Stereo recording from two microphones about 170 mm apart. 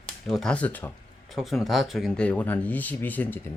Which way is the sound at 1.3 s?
Centre (ahead or behind).